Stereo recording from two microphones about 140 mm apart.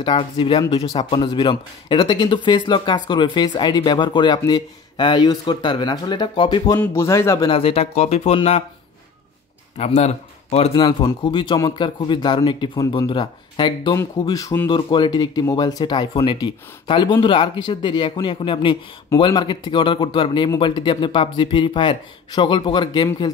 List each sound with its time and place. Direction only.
0.0 s speech: 40° left (ahead or behind)
6.8 s speech: 15° left (ahead or behind)
7.4 s speech: 40° left (ahead or behind)
9.8 s speech: 50° left (ahead or behind)
10.7 s speech: 30° left (ahead or behind)